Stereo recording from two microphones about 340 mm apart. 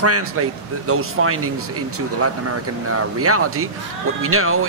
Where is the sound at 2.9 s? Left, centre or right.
Right.